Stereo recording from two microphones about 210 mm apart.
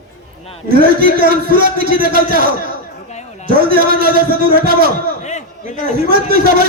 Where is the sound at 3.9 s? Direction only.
45° right (ahead or behind).